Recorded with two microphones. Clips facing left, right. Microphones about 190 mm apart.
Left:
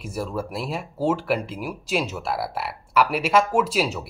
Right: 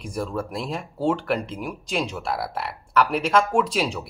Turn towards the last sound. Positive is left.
turn(degrees=5)  # may be behind; listen again after turning